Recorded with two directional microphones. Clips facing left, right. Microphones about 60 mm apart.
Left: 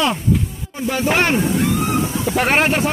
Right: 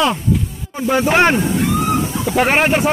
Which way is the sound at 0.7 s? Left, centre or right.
Right.